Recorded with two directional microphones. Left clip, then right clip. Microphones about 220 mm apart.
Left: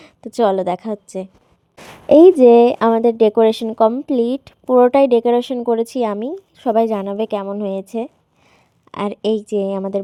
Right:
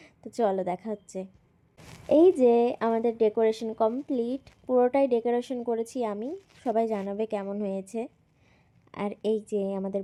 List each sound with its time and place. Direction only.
0.0 s speech: 15° left (ahead or behind)